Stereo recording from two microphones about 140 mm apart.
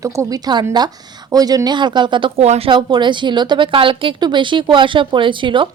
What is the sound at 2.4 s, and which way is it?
Speech, 50° right (ahead or behind).